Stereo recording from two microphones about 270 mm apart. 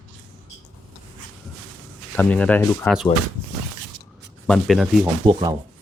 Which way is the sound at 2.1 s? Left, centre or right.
Centre.